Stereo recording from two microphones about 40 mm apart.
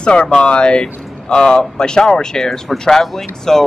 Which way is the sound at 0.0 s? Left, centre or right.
Left.